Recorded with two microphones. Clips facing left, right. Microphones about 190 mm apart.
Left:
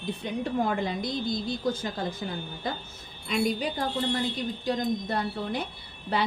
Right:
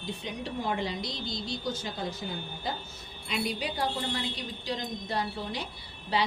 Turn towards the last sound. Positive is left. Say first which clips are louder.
# left 1 dB
turn(degrees=55)  # may be behind; listen again after turning